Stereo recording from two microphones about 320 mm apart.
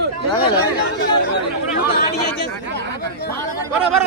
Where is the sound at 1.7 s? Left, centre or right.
Left.